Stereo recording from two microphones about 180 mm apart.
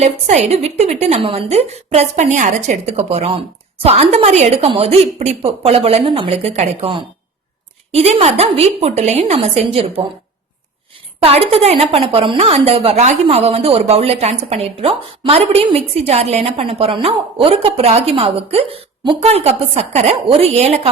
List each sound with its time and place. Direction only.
0.0 s a woman's voice: 35° right (ahead or behind)
11.2 s a woman's voice: 35° right (ahead or behind)